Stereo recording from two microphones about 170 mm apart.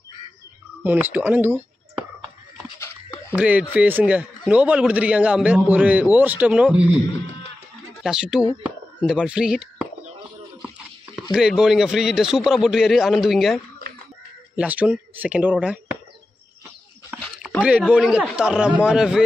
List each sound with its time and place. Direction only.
0.8 s a man's voice: 10° right (ahead or behind)
2.8 s a sound: 15° left (ahead or behind)
3.3 s a man's voice: 10° right (ahead or behind)
8.0 s a man's voice: 5° right (ahead or behind)
11.3 s a man's voice: 5° right (ahead or behind)
17.1 s a sound: 5° right (ahead or behind)
17.6 s a man's voice: 5° right (ahead or behind)